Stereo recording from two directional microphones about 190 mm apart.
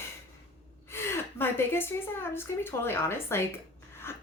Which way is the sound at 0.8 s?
15° left (ahead or behind).